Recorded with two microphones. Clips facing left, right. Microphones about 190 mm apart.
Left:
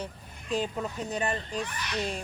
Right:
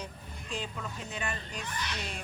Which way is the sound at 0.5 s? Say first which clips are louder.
Left 8 dB; 40° left (ahead or behind).